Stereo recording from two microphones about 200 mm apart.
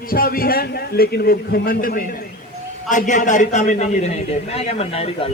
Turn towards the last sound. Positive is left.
turn(degrees=30)  # may be behind; listen again after turning